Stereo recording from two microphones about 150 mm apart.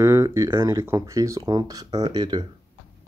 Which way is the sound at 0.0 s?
20° right (ahead or behind).